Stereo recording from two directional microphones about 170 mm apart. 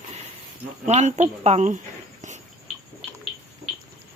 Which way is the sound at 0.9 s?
40° right (ahead or behind).